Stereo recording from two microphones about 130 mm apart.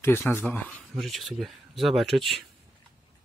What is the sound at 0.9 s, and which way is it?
Speech, centre (ahead or behind).